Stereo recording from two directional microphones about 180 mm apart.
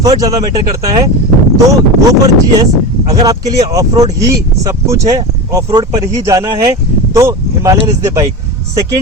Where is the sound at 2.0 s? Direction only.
20° right (ahead or behind).